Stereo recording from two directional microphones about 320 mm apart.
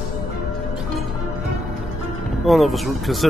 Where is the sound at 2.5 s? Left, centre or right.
Centre.